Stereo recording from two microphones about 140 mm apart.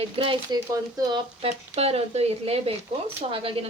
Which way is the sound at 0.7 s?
25° right (ahead or behind).